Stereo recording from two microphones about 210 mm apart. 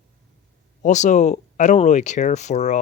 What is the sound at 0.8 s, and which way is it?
Speech, 35° left (ahead or behind).